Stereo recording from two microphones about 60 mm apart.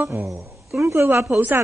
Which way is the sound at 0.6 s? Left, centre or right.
Centre.